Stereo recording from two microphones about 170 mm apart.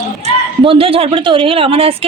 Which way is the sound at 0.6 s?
35° right (ahead or behind).